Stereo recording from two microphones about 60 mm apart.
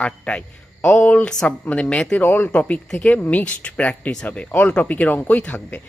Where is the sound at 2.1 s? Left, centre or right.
Left.